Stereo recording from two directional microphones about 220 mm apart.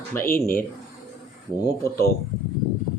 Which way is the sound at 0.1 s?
10° left (ahead or behind).